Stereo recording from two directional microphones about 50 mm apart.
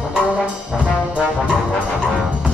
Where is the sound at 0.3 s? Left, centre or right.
Right.